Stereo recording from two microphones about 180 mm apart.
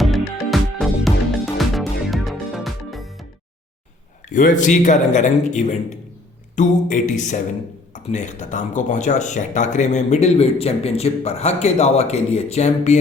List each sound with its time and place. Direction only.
0.0 s music: centre (ahead or behind)
4.3 s speech: 45° left (ahead or behind)